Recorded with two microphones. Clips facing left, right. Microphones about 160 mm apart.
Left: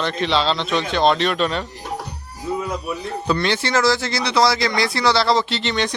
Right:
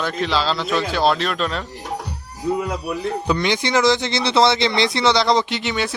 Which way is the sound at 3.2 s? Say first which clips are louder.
Left 2 dB; 15° right (ahead or behind).